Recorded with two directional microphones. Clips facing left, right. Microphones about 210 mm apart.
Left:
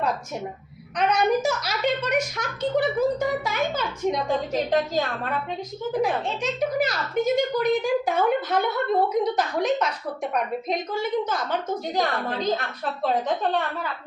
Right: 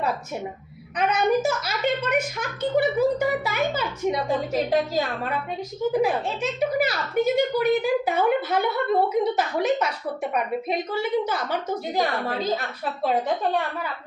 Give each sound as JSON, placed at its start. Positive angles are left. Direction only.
{"t": 0.9, "sound": "a woman's voice", "side_deg": -5}